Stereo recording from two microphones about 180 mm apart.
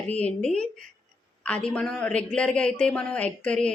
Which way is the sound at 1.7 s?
5° left (ahead or behind).